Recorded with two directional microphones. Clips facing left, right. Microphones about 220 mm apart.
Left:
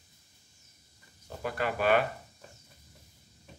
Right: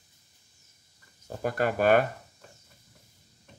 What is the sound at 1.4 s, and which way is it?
Speech, 45° right (ahead or behind).